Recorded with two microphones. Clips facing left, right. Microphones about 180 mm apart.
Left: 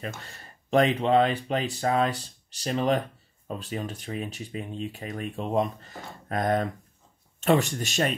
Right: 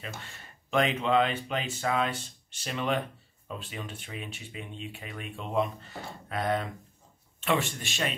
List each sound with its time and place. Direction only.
0.0 s speech: 40° left (ahead or behind)